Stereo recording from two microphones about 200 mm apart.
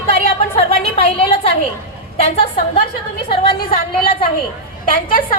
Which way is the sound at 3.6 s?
45° left (ahead or behind).